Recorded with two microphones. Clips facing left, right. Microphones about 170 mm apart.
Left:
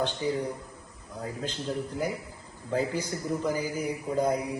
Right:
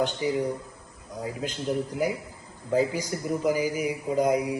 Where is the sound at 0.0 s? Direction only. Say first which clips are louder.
Right 3 dB; 15° right (ahead or behind).